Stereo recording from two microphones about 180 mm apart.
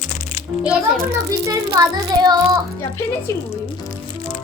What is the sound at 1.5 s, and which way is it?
Child singing, 20° right (ahead or behind).